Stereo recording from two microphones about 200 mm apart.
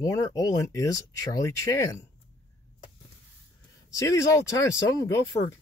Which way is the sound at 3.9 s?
15° left (ahead or behind).